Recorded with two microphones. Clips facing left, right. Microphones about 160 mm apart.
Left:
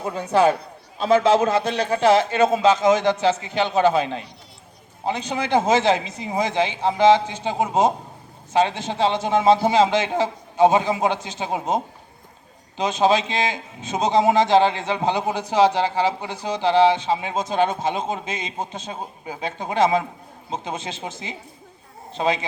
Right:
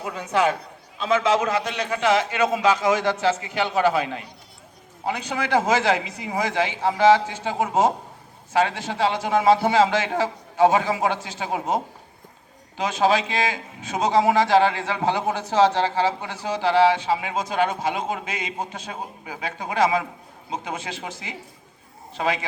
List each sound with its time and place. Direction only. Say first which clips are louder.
0.0 s a man's voice: left 4 dB; 30° left (ahead or behind)